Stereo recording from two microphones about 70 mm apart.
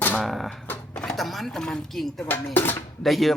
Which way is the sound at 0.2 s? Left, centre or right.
Centre.